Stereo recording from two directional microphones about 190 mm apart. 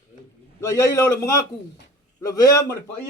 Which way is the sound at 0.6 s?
15° left (ahead or behind).